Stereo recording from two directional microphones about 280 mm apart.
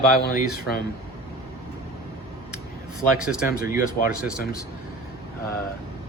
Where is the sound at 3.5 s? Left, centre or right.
Left.